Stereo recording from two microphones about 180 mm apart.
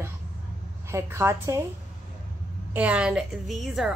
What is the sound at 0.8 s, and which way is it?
Speech, 15° right (ahead or behind).